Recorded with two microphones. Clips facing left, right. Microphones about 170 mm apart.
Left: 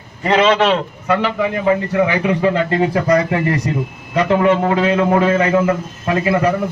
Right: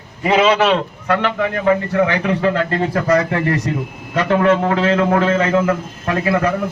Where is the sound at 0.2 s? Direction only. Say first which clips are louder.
Even; 5° right (ahead or behind); by 3.0 s 10° left (ahead or behind).